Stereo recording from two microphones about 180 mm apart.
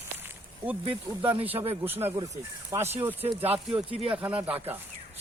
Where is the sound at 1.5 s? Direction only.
35° right (ahead or behind).